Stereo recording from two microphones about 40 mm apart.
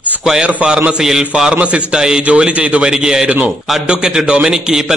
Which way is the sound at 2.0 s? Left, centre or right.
Centre.